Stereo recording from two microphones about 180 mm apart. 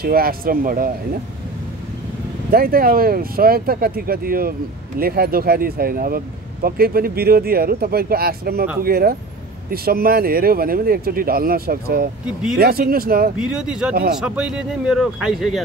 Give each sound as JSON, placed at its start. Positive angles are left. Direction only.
{"t": 0.0, "sound": "speech", "side_deg": -55}
{"t": 2.5, "sound": "speech", "side_deg": -55}
{"t": 13.4, "sound": "speech", "side_deg": -5}